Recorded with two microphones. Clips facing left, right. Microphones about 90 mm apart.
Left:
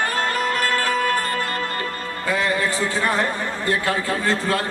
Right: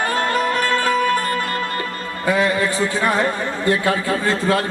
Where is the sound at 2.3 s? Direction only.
20° right (ahead or behind).